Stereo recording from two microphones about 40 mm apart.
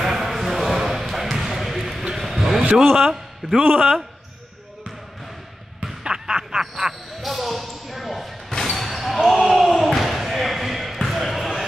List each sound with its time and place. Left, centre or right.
0.0 s a sound: centre
2.7 s a man's voice: centre
3.1 s a man's voice: centre
3.6 s a man's voice: right
6.0 s a sound: centre
6.7 s basketball bounce: centre